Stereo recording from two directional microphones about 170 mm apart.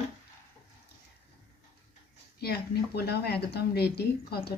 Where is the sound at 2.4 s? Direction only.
70° left (ahead or behind).